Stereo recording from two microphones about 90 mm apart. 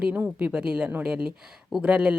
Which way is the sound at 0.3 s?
15° right (ahead or behind).